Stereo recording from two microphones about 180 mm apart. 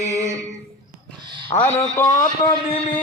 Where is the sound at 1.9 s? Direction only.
15° left (ahead or behind).